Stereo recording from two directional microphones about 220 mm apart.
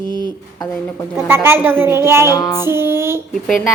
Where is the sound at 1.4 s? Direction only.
10° right (ahead or behind).